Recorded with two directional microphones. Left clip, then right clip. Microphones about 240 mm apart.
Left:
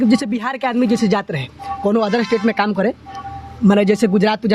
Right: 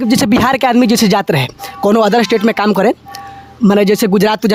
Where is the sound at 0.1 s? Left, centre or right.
Right.